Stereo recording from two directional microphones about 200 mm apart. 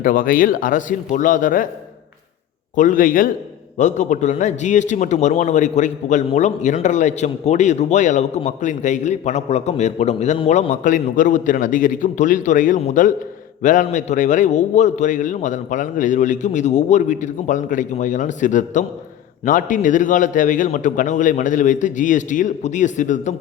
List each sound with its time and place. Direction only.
0.0 s speech: 45° left (ahead or behind)
2.7 s a man's voice: 40° left (ahead or behind)